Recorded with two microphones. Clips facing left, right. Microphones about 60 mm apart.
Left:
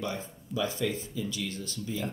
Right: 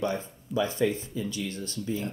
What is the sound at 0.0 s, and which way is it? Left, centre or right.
Speech, right.